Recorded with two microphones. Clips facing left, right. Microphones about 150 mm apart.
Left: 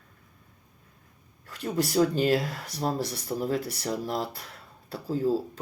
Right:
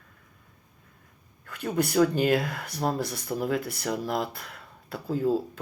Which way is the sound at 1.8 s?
55° right (ahead or behind).